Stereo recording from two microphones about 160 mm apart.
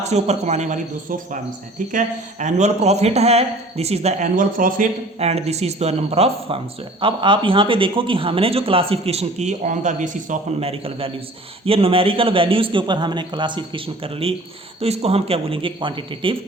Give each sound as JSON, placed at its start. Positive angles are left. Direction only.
{"t": 0.0, "sound": "speech", "side_deg": -45}
{"t": 1.9, "sound": "speech", "side_deg": -50}
{"t": 4.4, "sound": "speech", "side_deg": -60}
{"t": 5.2, "sound": "speech", "side_deg": -40}
{"t": 10.7, "sound": "speech", "side_deg": -35}